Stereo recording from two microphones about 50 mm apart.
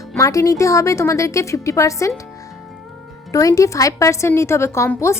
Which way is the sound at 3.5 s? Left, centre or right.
Left.